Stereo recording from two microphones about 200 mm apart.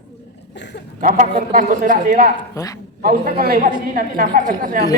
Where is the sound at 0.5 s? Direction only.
60° left (ahead or behind).